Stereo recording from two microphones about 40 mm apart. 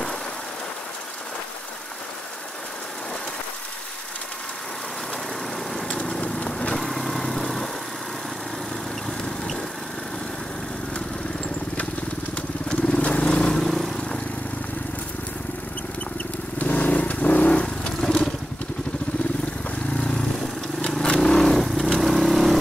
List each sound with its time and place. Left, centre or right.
5.9 s vehicle: left
6.8 s vehicle: centre
12.6 s vehicle: left
13.6 s vehicle: centre
16.5 s vehicle: left
18.0 s motorcycle: centre
19.9 s vehicle: left
20.9 s vehicle: centre
21.6 s vehicle: centre